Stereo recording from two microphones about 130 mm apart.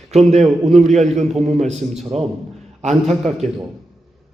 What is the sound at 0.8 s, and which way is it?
A man's voice, 65° right (ahead or behind).